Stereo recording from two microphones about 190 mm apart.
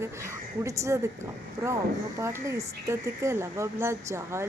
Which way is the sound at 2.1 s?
15° right (ahead or behind).